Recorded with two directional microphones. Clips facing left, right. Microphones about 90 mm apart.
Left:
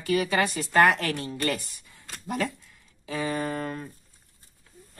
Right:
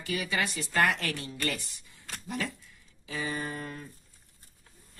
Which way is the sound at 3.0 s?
55° left (ahead or behind).